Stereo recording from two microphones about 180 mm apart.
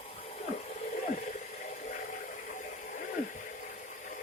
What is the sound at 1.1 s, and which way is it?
Water, 45° left (ahead or behind).